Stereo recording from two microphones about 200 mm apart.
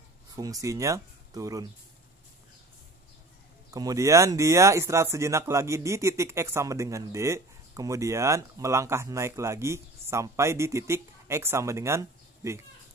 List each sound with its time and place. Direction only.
0.4 s speech: 15° right (ahead or behind)
3.7 s speech: 15° right (ahead or behind)